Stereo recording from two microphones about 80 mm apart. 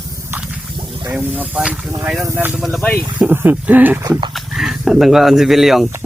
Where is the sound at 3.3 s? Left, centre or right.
Right.